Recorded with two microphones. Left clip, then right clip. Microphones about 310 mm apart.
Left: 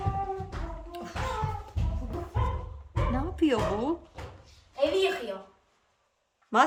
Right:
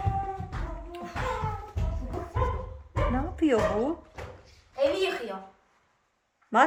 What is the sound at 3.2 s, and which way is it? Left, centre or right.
Speech, centre.